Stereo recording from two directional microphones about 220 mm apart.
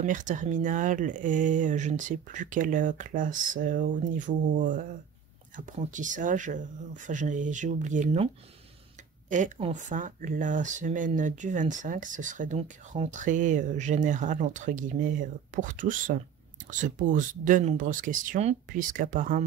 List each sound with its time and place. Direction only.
0.0 s speech: 35° right (ahead or behind)
9.3 s speech: 35° right (ahead or behind)